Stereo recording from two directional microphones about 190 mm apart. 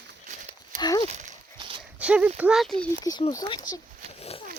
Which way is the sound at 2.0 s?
5° right (ahead or behind).